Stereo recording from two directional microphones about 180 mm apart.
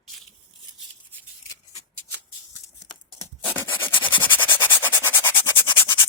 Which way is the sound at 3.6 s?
10° left (ahead or behind).